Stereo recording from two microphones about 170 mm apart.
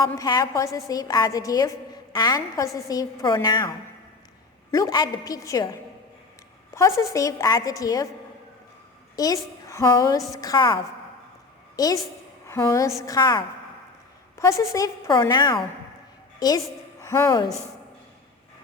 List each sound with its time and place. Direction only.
0.2 s a woman's voice: 20° left (ahead or behind)
6.7 s a woman's voice: 15° left (ahead or behind)
9.1 s a woman's voice: 20° left (ahead or behind)
11.8 s a woman's voice: 20° left (ahead or behind)